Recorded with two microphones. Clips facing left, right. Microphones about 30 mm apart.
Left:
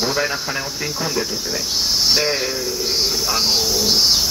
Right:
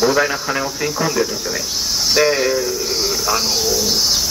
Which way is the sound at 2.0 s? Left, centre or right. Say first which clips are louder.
Right 6 dB; centre.